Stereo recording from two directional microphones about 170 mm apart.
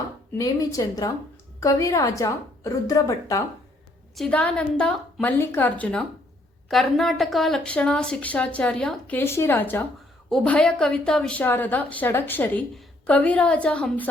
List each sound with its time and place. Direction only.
0.3 s speech: 20° left (ahead or behind)
4.1 s a woman's voice: 5° left (ahead or behind)